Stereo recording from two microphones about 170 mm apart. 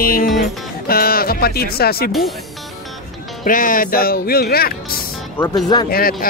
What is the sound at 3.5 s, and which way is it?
Speech, 55° left (ahead or behind).